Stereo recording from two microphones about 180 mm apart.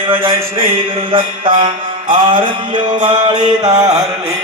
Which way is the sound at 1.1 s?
30° right (ahead or behind).